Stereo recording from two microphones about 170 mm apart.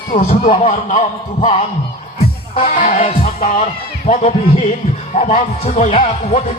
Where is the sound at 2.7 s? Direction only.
50° left (ahead or behind).